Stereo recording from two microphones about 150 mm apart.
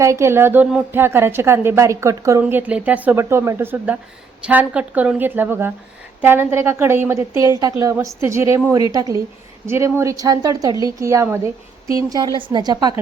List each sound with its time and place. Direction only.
0.0 s a woman's voice: 20° right (ahead or behind)